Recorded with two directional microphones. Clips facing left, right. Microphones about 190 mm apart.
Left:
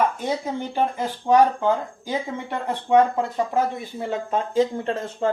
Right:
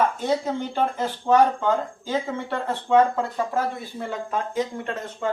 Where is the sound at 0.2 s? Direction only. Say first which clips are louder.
Right 2 dB; 15° left (ahead or behind).